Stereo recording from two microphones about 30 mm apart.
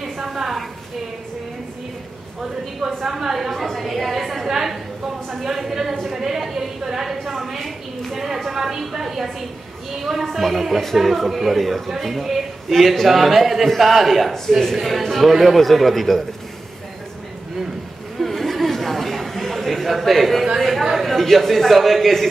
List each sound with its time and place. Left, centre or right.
0.2 s a sound: centre
3.0 s a woman's voice: centre
6.4 s a sound: centre
8.5 s a woman's voice: centre
14.5 s a man's voice: centre
18.2 s chatter: centre
20.6 s a man's voice: centre